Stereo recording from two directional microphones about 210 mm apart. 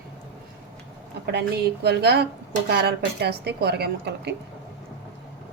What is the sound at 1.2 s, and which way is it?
A woman's voice, 50° right (ahead or behind).